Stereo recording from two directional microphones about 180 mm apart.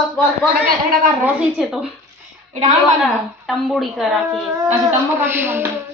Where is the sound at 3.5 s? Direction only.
Centre (ahead or behind).